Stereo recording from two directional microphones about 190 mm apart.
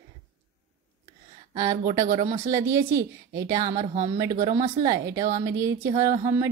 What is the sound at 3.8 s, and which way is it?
Speech, 40° right (ahead or behind).